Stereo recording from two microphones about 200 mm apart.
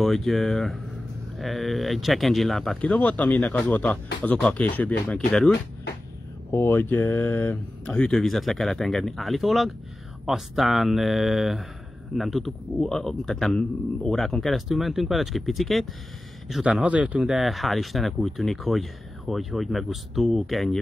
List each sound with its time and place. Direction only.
0.0 s speech: centre (ahead or behind)